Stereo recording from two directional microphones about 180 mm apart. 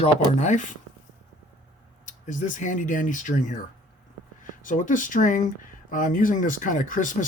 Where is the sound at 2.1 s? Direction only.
45° left (ahead or behind).